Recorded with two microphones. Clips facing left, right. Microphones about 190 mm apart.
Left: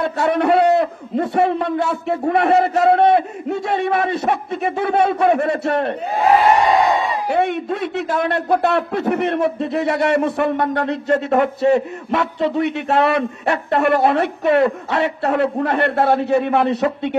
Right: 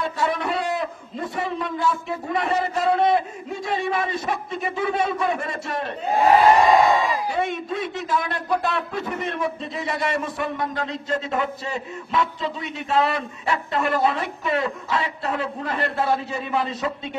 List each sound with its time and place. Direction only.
0.0 s a man's voice: 65° left (ahead or behind)
7.2 s speech: 65° left (ahead or behind)